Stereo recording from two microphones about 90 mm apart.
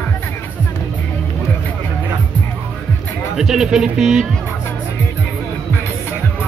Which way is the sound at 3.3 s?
5° right (ahead or behind).